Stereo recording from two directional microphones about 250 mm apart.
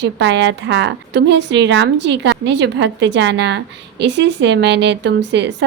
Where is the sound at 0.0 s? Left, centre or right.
Right.